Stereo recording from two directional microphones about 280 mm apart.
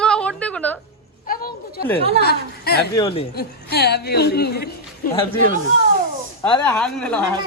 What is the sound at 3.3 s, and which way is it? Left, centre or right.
A woman's voice, left.